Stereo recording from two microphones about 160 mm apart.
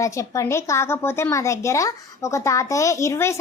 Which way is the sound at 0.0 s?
20° left (ahead or behind).